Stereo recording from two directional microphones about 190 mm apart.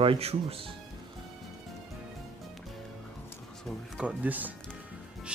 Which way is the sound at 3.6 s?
5° right (ahead or behind).